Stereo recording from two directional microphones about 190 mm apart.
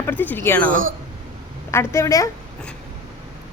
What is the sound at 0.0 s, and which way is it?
Speech, 10° left (ahead or behind).